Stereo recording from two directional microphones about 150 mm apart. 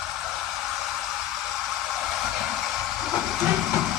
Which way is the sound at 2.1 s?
Centre (ahead or behind).